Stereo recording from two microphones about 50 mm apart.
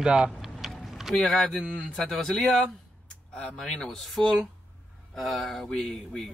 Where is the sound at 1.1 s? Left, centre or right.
Centre.